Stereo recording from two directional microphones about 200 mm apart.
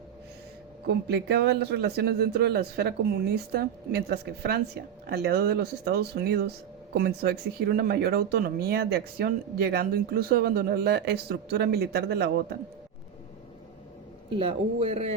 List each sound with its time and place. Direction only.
0.9 s a man's voice: 55° right (ahead or behind)
14.3 s speech: 25° right (ahead or behind)